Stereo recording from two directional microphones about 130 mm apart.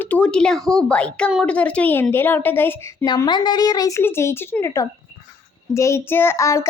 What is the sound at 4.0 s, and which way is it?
Child singing, 20° left (ahead or behind).